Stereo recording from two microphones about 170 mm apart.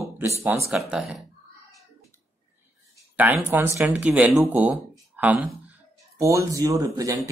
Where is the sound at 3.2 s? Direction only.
15° right (ahead or behind).